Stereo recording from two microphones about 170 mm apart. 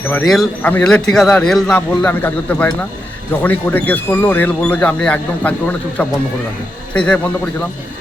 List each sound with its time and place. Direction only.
0.1 s a man's voice: centre (ahead or behind)